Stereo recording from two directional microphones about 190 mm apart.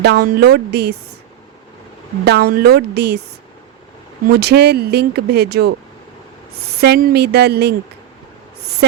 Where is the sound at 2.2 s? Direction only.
60° right (ahead or behind).